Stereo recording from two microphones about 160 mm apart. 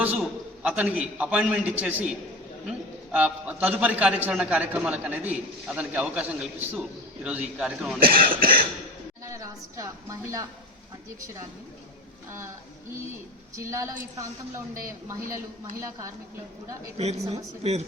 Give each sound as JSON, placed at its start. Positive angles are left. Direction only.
{"t": 0.0, "sound": "a man's voice", "side_deg": -10}
{"t": 7.9, "sound": "speech", "side_deg": -65}
{"t": 9.2, "sound": "speech", "side_deg": -20}
{"t": 13.6, "sound": "a woman's voice", "side_deg": -20}
{"t": 17.0, "sound": "a woman's voice", "side_deg": -45}